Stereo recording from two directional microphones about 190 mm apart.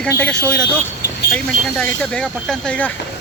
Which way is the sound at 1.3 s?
5° left (ahead or behind).